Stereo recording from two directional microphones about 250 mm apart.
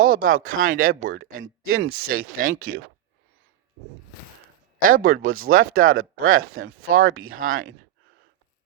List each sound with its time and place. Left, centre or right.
0.0 s speech: right
1.4 s speech: right
2.0 s speech: right
4.9 s speech: right
5.2 s speech: right
5.5 s speech: right
5.9 s speech: right